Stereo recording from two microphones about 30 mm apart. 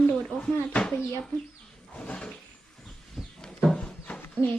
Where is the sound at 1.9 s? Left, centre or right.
Left.